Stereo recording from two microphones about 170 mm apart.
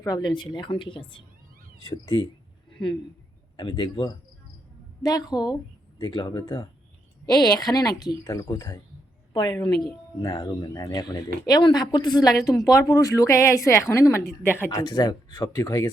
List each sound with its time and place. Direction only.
0.0 s a woman's voice: 25° left (ahead or behind)